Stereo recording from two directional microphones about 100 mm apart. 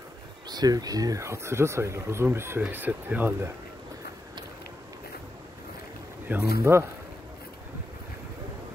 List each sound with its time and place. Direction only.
0.5 s speech: 40° right (ahead or behind); by 3.5 s 25° right (ahead or behind)
6.2 s speech: 20° right (ahead or behind)